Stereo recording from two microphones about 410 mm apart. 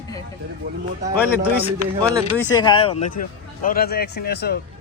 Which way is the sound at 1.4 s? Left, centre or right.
Centre.